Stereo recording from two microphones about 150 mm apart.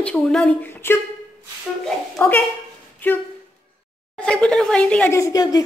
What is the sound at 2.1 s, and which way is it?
Speech, 15° left (ahead or behind).